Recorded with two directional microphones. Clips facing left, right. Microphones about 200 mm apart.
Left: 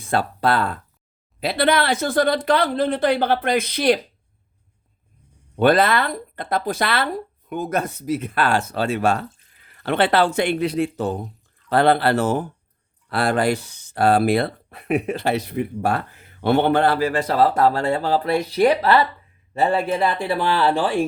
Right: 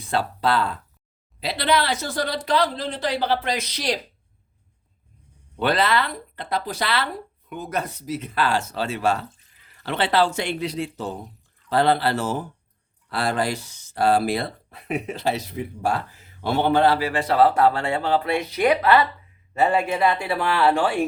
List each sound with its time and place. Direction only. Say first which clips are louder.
0.0 s speech: left 3 dB; 50° left (ahead or behind)
5.5 s speech: left 5 dB; 50° left (ahead or behind); by 21.0 s 35° left (ahead or behind)